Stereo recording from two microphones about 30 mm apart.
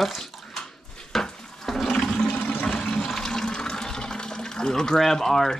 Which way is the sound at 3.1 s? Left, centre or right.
Centre.